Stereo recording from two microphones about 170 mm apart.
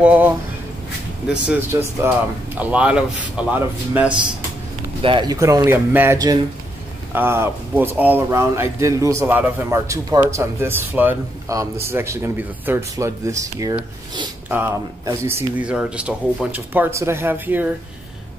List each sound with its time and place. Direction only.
0.0 s speech: 10° right (ahead or behind)
1.3 s speech: 10° right (ahead or behind)
5.0 s speech: 25° right (ahead or behind); by 17.7 s 10° right (ahead or behind)